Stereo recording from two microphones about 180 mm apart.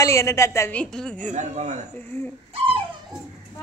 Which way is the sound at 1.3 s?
40° right (ahead or behind).